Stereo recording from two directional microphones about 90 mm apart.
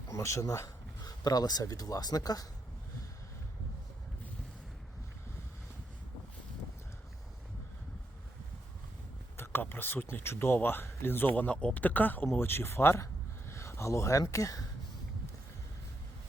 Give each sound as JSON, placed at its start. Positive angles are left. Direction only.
{"t": 0.1, "sound": "speech", "side_deg": 35}
{"t": 9.4, "sound": "speech", "side_deg": 25}